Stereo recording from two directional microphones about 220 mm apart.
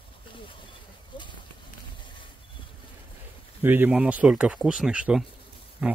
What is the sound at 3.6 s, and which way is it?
Speech, 10° right (ahead or behind).